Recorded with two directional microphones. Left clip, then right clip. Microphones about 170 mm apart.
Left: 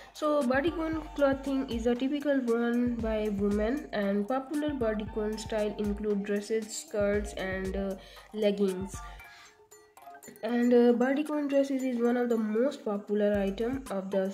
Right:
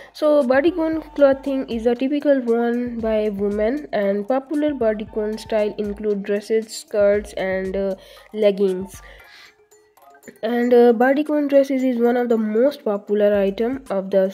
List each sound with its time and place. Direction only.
0.5 s speech: 45° right (ahead or behind)
10.4 s speech: 60° right (ahead or behind)